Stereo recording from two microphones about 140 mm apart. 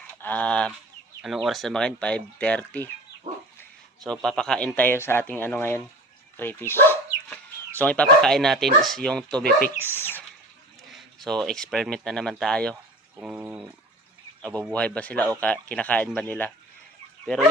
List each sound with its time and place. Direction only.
0.2 s fowl: 10° left (ahead or behind)
1.2 s speech: centre (ahead or behind)
4.0 s speech: 5° left (ahead or behind)
6.3 s chicken: 15° left (ahead or behind)
8.2 s speech: 5° left (ahead or behind)
9.5 s speech: 85° left
9.8 s speech: 15° left (ahead or behind)
10.9 s speech: centre (ahead or behind)
13.1 s speech: 10° right (ahead or behind)
14.7 s speech: 10° left (ahead or behind)